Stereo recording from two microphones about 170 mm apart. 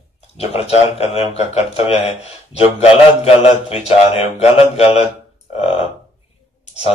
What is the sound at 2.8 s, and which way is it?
A man's voice, 35° left (ahead or behind).